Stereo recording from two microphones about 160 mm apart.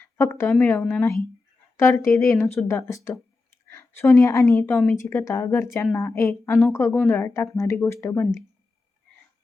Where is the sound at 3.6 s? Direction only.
15° left (ahead or behind).